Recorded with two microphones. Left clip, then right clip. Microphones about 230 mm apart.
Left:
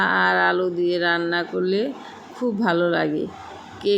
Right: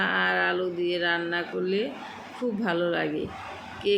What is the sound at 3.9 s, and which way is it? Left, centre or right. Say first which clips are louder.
Speech: left 4 dB; centre.